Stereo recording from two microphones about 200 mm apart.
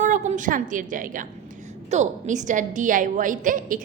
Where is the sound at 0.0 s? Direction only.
35° right (ahead or behind).